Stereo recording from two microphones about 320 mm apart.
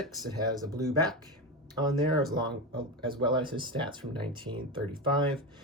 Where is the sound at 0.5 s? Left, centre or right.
Centre.